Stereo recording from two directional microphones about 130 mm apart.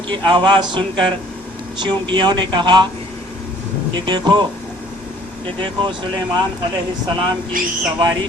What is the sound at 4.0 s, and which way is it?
Speech, 35° right (ahead or behind).